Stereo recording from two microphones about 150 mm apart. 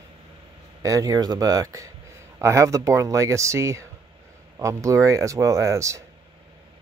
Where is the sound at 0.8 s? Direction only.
25° right (ahead or behind).